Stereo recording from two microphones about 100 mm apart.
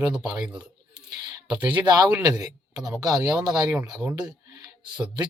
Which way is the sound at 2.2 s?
40° right (ahead or behind).